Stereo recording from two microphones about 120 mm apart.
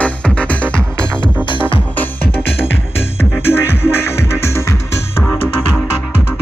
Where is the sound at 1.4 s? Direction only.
45° left (ahead or behind).